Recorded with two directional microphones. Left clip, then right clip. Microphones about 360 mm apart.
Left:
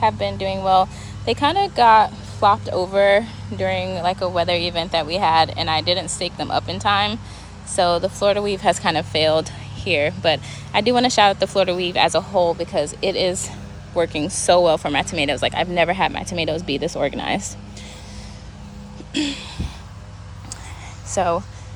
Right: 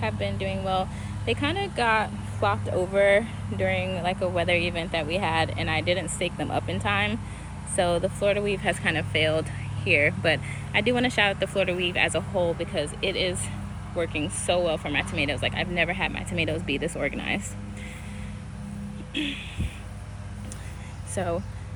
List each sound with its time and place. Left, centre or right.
0.0 s speech: centre
12.5 s speech: left
13.1 s speech: centre
21.2 s speech: centre